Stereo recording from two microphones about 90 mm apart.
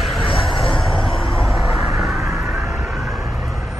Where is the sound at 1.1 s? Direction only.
70° left (ahead or behind).